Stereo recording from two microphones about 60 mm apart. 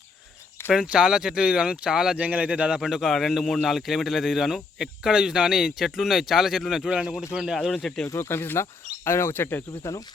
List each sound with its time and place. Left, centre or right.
0.9 s speech: centre
2.2 s speech: right
2.8 s speech: centre
7.8 s speech: centre
8.0 s speech: left
8.3 s speech: left